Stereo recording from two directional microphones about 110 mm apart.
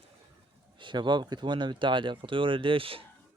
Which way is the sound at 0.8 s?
45° right (ahead or behind).